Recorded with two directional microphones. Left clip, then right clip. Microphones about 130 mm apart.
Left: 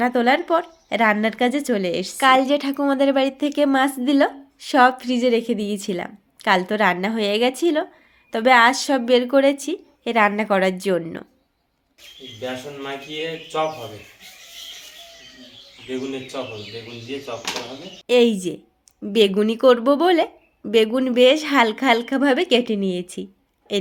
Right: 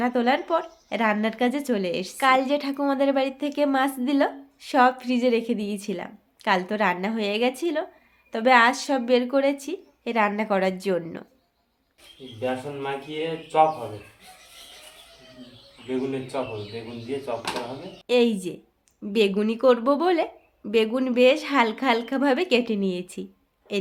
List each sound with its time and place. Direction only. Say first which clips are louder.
0.0 s speech: left 5 dB; 45° left (ahead or behind)
12.4 s speech: right 1 dB; centre (ahead or behind)
18.0 s speech: left 5 dB; 35° left (ahead or behind)